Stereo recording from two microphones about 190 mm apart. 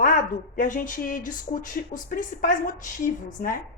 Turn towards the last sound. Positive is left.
turn(degrees=45)  # may be behind; listen again after turning